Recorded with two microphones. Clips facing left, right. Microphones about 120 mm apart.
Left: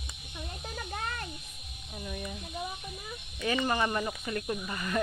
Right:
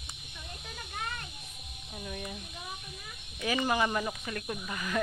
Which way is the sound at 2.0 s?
Centre (ahead or behind).